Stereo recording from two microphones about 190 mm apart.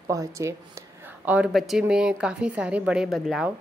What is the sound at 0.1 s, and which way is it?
A woman's voice, 15° right (ahead or behind).